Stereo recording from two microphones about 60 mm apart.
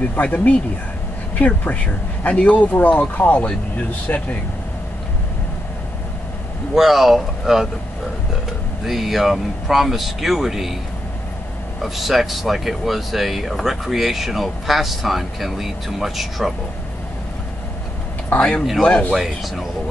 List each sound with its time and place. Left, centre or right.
0.1 s speech: left
6.7 s speech: centre
8.8 s speech: centre
11.8 s speech: centre
18.8 s speech: centre
19.1 s speech: centre